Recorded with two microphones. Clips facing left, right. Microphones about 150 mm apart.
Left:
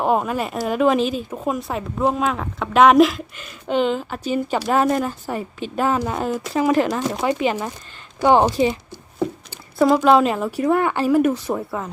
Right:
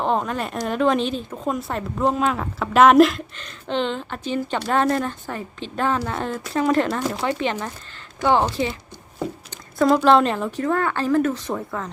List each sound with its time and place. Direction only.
0.0 s speech: 10° left (ahead or behind)
7.2 s speech: 20° left (ahead or behind)
7.4 s speech: 10° left (ahead or behind)
8.2 s a sound: 15° left (ahead or behind)
9.7 s speech: 5° left (ahead or behind)